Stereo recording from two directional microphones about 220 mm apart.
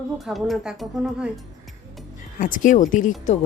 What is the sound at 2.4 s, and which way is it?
Speech, 35° left (ahead or behind).